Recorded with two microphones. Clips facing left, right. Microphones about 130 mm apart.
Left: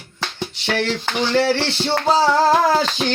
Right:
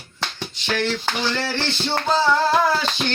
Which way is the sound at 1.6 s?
80° left.